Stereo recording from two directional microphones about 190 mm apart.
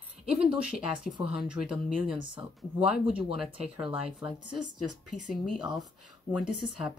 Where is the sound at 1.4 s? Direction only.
5° right (ahead or behind).